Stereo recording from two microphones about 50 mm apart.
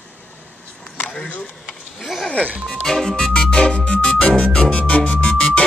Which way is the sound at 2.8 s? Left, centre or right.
Centre.